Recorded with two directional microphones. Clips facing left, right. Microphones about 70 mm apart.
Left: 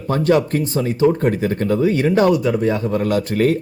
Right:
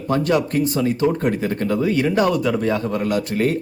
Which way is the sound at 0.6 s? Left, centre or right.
Left.